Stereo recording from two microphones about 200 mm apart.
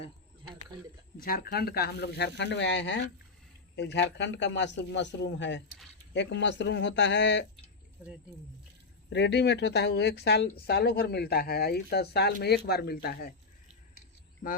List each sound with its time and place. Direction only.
1.2 s a man's voice: 45° left (ahead or behind)
9.0 s a man's voice: 60° left (ahead or behind)